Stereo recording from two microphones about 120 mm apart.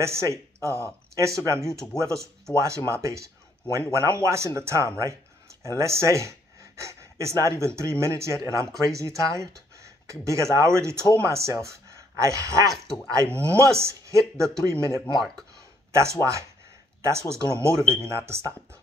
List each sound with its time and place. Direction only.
0.0 s speech: 25° right (ahead or behind)
12.7 s speech: 5° left (ahead or behind)
13.0 s speech: 25° right (ahead or behind)
15.1 s speech: centre (ahead or behind)
15.9 s speech: 25° right (ahead or behind)